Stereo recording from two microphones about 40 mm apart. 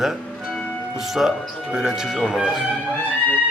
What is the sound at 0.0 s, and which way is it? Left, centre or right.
Music, centre.